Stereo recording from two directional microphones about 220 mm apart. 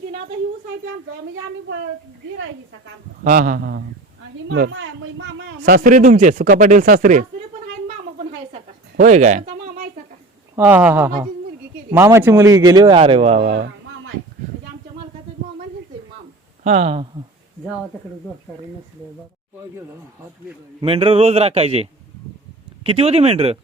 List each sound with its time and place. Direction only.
3.2 s speech: 40° right (ahead or behind)
4.7 s speech: 60° right (ahead or behind)
5.6 s speech: 40° right (ahead or behind)
9.0 s speech: 35° right (ahead or behind)
10.5 s speech: 10° right (ahead or behind); by 13.7 s 30° right (ahead or behind)
16.6 s speech: 30° right (ahead or behind)
20.8 s speech: 25° right (ahead or behind)